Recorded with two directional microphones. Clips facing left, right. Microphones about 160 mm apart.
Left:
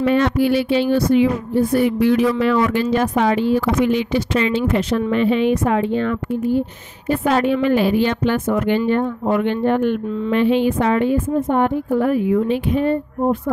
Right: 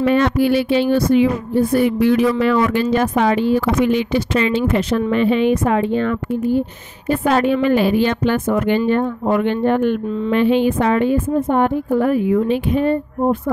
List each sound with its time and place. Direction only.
0.0 s a woman's voice: 60° right (ahead or behind)